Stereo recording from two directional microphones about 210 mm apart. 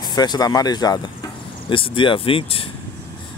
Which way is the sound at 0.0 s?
20° left (ahead or behind).